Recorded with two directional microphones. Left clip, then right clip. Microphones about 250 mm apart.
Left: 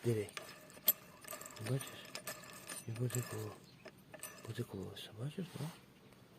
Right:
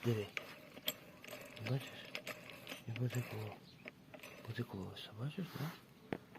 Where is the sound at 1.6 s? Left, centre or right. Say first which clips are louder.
Left 1 dB; centre.